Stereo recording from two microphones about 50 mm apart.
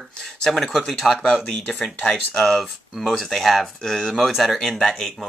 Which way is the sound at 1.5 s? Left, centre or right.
Left.